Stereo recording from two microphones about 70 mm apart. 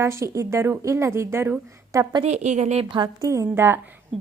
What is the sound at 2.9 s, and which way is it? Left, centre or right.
Speech, right.